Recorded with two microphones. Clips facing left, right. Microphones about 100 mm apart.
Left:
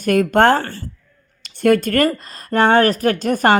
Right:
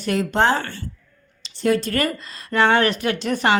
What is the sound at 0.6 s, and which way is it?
Speech, 40° left (ahead or behind).